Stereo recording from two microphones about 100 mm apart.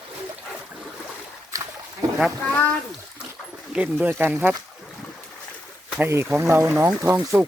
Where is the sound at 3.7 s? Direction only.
20° right (ahead or behind).